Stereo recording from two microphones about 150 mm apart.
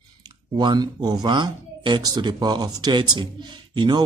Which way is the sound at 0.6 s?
30° right (ahead or behind).